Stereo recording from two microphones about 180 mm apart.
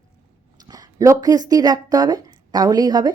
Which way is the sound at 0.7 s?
20° right (ahead or behind).